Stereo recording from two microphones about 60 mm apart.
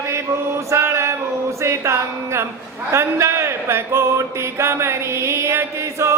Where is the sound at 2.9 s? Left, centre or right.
Right.